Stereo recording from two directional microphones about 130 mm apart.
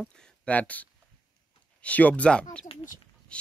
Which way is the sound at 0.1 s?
10° left (ahead or behind).